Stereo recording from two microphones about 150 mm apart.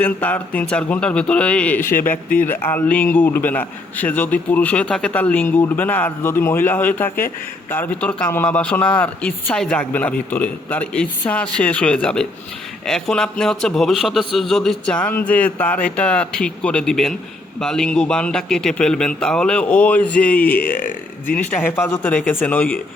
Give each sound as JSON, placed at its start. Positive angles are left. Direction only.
{"t": 0.0, "sound": "a man's voice", "side_deg": 10}
{"t": 20.6, "sound": "speech", "side_deg": 70}
{"t": 21.3, "sound": "a man's voice", "side_deg": 15}